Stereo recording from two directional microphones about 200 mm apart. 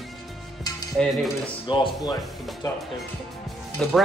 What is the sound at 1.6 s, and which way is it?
Speech, 25° left (ahead or behind).